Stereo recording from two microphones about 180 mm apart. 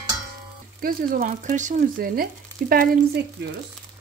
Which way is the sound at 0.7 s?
50° right (ahead or behind).